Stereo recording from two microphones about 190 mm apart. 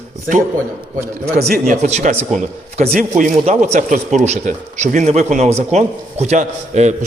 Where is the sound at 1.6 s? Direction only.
40° right (ahead or behind).